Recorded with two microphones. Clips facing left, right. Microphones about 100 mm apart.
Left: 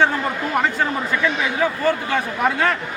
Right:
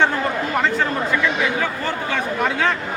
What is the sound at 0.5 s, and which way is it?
Speech, 10° left (ahead or behind).